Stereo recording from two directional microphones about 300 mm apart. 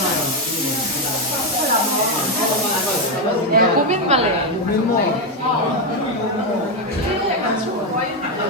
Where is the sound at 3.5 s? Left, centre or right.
Right.